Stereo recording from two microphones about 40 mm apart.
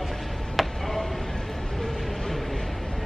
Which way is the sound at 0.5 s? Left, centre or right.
Centre.